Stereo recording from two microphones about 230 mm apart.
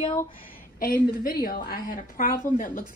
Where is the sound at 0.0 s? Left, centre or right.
Centre.